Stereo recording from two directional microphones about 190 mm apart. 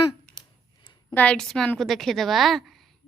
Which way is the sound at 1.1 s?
5° left (ahead or behind).